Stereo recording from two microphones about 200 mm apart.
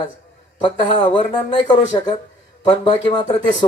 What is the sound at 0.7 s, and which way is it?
A man's voice, 25° left (ahead or behind).